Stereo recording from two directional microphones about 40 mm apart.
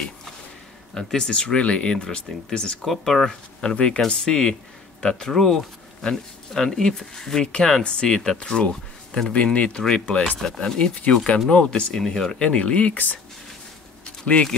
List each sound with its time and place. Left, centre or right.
0.9 s speech: centre
2.8 s speech: centre
3.6 s speech: left
7.4 s speech: left
11.9 s speech: centre
12.4 s speech: left
14.2 s speech: left